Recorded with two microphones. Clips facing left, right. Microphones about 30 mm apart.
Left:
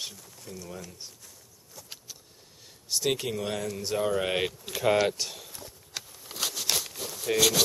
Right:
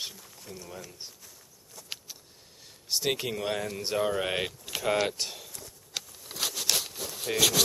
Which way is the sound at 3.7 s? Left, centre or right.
Right.